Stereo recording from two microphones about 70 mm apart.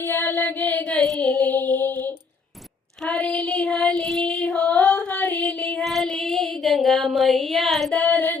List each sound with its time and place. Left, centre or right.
0.0 s music: left
3.1 s child singing: centre
3.7 s child singing: centre
4.8 s a sound: left
5.8 s child singing: centre
7.9 s child singing: centre